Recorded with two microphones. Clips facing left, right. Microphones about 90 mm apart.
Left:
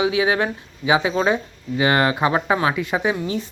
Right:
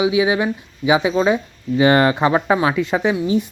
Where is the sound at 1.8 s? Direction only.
30° right (ahead or behind).